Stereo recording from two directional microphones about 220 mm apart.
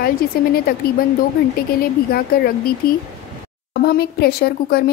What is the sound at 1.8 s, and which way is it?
Speech, 45° left (ahead or behind).